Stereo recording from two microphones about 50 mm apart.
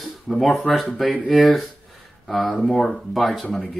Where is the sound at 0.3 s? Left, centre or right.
Centre.